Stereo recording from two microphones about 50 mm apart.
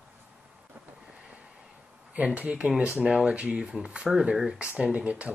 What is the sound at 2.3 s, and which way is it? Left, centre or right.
Speech, right.